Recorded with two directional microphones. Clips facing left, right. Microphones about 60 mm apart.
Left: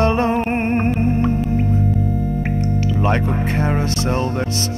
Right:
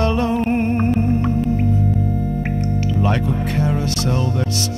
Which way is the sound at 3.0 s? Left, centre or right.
Left.